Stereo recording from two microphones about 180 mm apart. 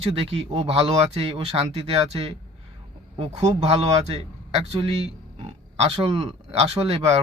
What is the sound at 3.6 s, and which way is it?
A man's voice, 35° right (ahead or behind).